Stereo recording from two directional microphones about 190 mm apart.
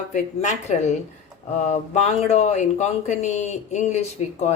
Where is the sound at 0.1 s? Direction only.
40° left (ahead or behind).